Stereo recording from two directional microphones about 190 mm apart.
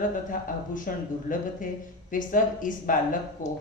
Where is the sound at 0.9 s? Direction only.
45° left (ahead or behind).